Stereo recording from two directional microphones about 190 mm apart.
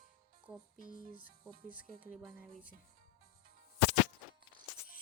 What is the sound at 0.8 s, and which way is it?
Music, 45° left (ahead or behind).